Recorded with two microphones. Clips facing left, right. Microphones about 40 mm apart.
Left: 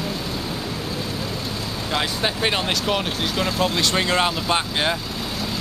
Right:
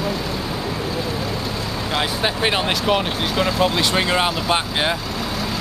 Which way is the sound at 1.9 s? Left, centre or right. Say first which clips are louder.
Right 2 dB; centre.